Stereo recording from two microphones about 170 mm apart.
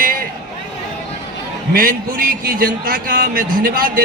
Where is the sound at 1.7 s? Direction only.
60° right (ahead or behind).